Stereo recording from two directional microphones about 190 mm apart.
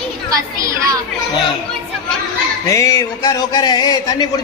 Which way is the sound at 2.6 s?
15° left (ahead or behind).